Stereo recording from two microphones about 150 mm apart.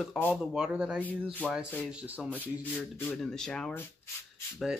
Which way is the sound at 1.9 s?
10° right (ahead or behind).